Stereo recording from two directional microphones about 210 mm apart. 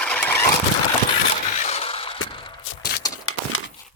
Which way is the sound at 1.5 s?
35° left (ahead or behind).